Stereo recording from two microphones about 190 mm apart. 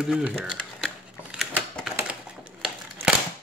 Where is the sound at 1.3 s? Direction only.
Centre (ahead or behind).